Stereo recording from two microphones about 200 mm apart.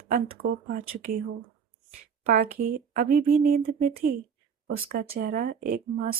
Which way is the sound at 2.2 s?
50° right (ahead or behind).